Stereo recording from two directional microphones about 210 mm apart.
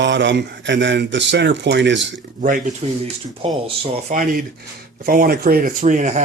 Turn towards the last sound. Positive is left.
turn(degrees=-35)  # may be behind; listen again after turning